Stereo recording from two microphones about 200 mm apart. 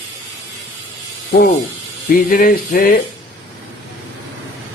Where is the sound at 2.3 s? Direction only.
45° left (ahead or behind).